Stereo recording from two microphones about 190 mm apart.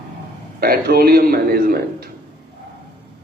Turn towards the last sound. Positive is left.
turn(degrees=-50)  # may be behind; listen again after turning